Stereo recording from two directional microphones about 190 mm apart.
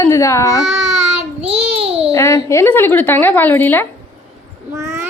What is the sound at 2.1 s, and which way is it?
Speech, 15° left (ahead or behind).